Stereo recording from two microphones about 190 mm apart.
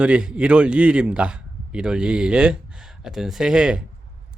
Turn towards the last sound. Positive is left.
turn(degrees=-5)  # may be behind; listen again after turning